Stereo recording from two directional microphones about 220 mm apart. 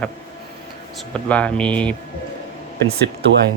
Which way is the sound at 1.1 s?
5° left (ahead or behind).